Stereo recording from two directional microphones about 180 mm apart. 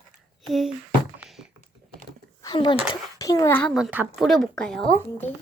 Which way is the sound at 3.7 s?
5° right (ahead or behind).